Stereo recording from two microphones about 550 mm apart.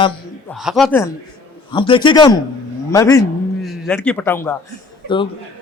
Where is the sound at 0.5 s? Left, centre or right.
Centre.